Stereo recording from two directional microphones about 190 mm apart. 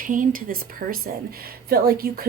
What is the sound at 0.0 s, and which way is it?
Speech, 45° right (ahead or behind).